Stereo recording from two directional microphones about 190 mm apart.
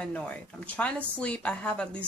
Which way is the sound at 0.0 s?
5° left (ahead or behind).